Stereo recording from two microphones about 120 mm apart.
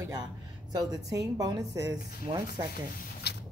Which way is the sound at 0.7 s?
30° right (ahead or behind).